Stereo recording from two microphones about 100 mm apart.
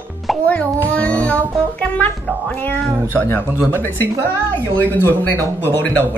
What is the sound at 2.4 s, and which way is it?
Speech, 15° left (ahead or behind).